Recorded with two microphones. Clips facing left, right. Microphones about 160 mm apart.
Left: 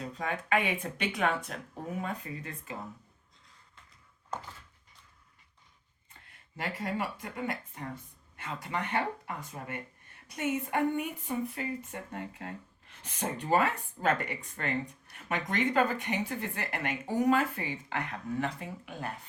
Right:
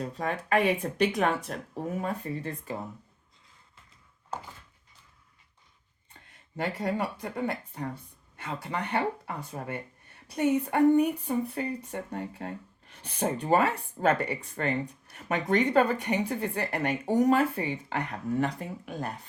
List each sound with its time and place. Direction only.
0.0 s speech: 40° right (ahead or behind)
6.6 s speech: 30° right (ahead or behind)